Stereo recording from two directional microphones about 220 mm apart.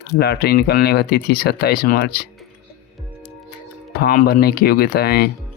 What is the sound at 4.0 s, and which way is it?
Speech, 45° left (ahead or behind).